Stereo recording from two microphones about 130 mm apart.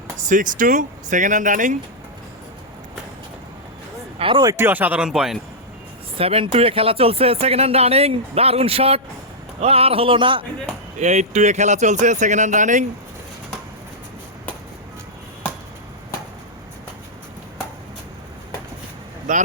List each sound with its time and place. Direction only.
0.2 s speech: 85° right
4.2 s speech: 40° right (ahead or behind)
4.4 s speech: 20° right (ahead or behind)
6.1 s speech: 50° right (ahead or behind)
11.0 s a man's voice: 60° right (ahead or behind)
19.3 s a man's voice: 75° right (ahead or behind)